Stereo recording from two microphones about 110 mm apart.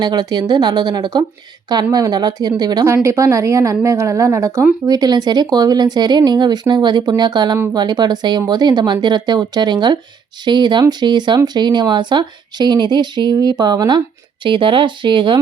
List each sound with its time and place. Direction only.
0.0 s a woman's voice: 40° right (ahead or behind)
2.8 s a woman's voice: 25° right (ahead or behind)
4.9 s a woman's voice: 40° right (ahead or behind)